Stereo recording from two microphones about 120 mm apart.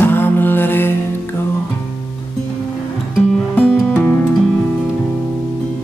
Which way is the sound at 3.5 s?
10° left (ahead or behind).